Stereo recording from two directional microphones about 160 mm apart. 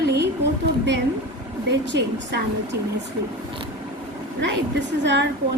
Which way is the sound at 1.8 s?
90° right.